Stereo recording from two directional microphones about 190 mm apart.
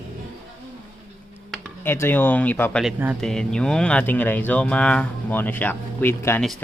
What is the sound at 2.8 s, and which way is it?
Speech, 5° right (ahead or behind).